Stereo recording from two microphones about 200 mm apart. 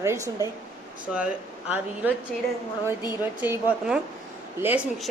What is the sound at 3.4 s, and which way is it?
Speech, 5° right (ahead or behind).